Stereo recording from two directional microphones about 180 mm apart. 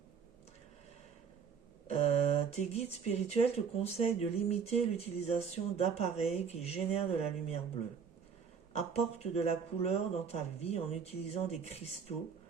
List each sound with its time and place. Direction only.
1.9 s speech: 35° left (ahead or behind)
8.7 s speech: 35° left (ahead or behind)